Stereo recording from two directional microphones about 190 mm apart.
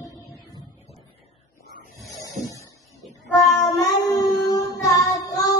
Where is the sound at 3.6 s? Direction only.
20° left (ahead or behind).